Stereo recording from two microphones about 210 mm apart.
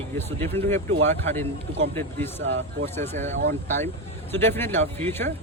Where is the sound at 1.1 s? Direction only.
10° left (ahead or behind).